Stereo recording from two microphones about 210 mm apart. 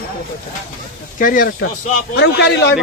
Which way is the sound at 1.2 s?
40° left (ahead or behind).